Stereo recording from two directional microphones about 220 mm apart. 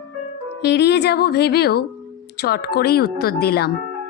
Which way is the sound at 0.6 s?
50° left (ahead or behind).